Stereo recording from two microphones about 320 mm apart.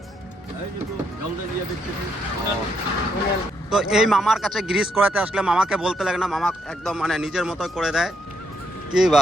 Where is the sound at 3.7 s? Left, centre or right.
Centre.